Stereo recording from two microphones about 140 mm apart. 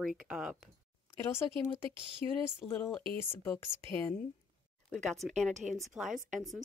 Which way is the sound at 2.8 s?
5° left (ahead or behind).